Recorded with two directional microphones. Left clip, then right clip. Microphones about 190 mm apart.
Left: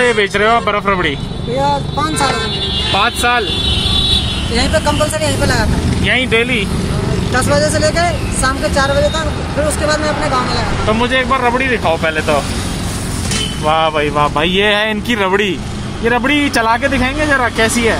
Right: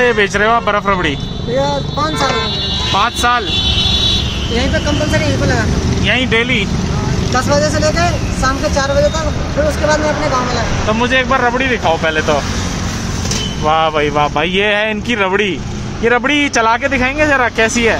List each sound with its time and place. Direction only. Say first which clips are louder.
0.0 s speech: even; centre (ahead or behind)
2.9 s speech: even; centre (ahead or behind)
6.0 s speech: even; 5° left (ahead or behind)
10.9 s speech: right 1 dB; 5° right (ahead or behind)
13.7 s speech: right 1 dB; centre (ahead or behind)
16.1 s speech: right 1 dB; 20° right (ahead or behind)